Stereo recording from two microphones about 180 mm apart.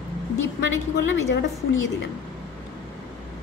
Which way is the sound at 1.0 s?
90° left.